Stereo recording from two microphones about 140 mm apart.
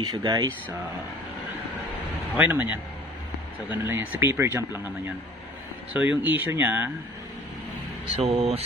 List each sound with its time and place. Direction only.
0.0 s speech: 30° right (ahead or behind)
2.3 s speech: 10° right (ahead or behind)
8.1 s speech: 45° right (ahead or behind)